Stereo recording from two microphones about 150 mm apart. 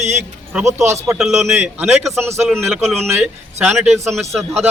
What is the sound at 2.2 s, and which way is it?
Speech, 15° right (ahead or behind).